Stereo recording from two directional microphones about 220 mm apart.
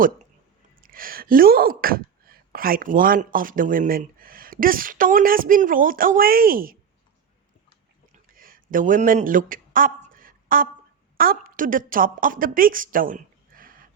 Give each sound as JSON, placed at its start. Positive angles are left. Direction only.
{"t": 0.8, "sound": "speech", "side_deg": -40}
{"t": 8.3, "sound": "a sound", "side_deg": -40}
{"t": 11.2, "sound": "a woman's voice", "side_deg": -40}